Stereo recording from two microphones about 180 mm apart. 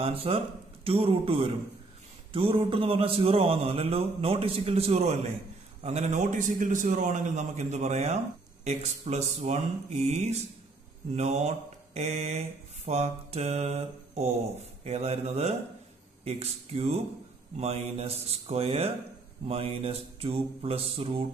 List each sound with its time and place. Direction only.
0.0 s a man's voice: 30° right (ahead or behind)